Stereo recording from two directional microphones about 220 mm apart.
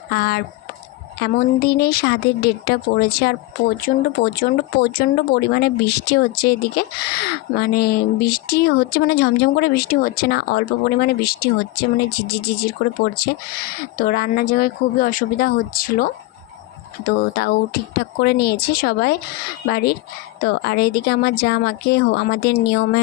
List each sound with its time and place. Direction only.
0.1 s speech: 45° left (ahead or behind)